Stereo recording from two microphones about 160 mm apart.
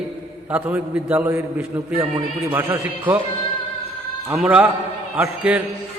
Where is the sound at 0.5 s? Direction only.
10° right (ahead or behind).